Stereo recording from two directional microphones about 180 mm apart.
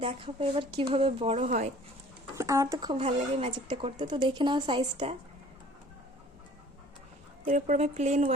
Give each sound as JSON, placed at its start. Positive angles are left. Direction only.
{"t": 0.0, "sound": "a woman's voice", "side_deg": -30}
{"t": 2.3, "sound": "speech", "side_deg": -15}
{"t": 7.4, "sound": "a woman's voice", "side_deg": -40}